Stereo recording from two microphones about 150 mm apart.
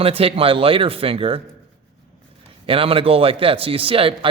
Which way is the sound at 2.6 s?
40° right (ahead or behind).